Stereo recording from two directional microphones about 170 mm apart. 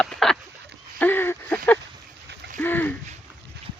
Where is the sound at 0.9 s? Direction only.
10° left (ahead or behind).